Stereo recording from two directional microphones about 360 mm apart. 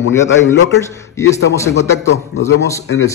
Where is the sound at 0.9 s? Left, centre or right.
Centre.